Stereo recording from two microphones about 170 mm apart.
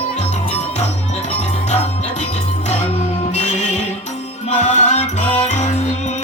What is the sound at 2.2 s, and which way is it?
Music, 45° left (ahead or behind).